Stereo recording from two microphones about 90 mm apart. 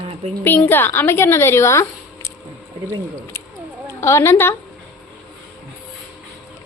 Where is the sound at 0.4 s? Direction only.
25° left (ahead or behind).